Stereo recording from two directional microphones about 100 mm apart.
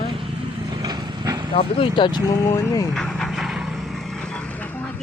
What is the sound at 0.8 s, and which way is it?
Vehicle, 45° right (ahead or behind).